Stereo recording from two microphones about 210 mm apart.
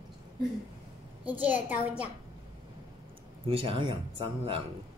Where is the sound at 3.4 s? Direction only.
25° right (ahead or behind).